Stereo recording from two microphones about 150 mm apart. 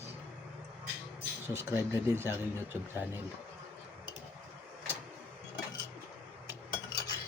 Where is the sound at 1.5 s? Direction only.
20° right (ahead or behind).